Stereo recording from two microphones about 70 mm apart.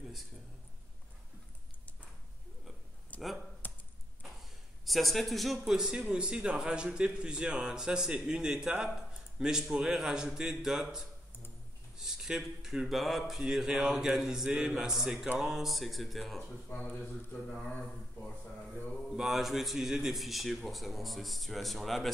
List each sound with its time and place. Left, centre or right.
3.1 s a sound: left
4.4 s a man's voice: centre
17.0 s speech: centre
19.1 s a man's voice: centre